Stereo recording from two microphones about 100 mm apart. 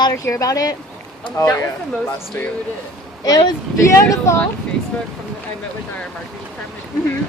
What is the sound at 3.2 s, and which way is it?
Speech, 40° left (ahead or behind).